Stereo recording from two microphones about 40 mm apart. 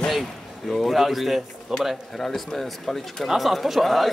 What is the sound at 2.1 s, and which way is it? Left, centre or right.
A man's voice, centre.